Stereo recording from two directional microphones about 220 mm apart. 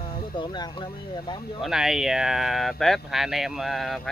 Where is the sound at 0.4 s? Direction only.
20° left (ahead or behind).